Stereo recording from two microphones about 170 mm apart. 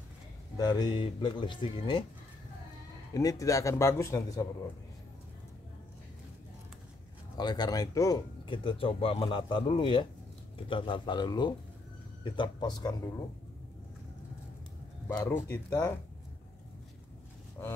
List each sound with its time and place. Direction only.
0.6 s speech: 25° left (ahead or behind)
3.2 s speech: 20° left (ahead or behind)
7.3 s speech: 25° left (ahead or behind)
8.5 s speech: 30° left (ahead or behind)
15.0 s speech: 10° left (ahead or behind)